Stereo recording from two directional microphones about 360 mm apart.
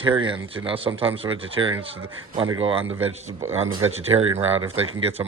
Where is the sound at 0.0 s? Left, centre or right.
Centre.